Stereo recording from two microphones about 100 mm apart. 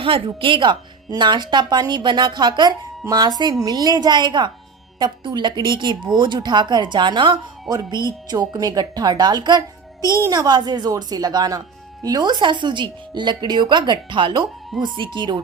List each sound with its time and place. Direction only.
0.0 s a woman's voice: 60° right (ahead or behind)